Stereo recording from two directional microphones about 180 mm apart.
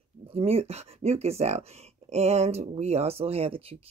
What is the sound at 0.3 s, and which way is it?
Speech, 35° right (ahead or behind).